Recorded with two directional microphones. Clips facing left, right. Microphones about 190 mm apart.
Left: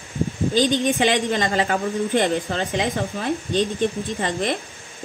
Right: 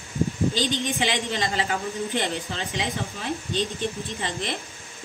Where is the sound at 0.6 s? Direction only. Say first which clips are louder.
Left 7 dB; 50° left (ahead or behind).